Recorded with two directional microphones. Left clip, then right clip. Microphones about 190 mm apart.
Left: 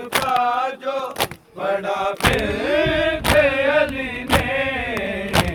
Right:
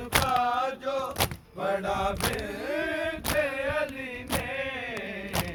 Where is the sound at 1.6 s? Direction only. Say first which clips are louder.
Left 7 dB; 55° right (ahead or behind).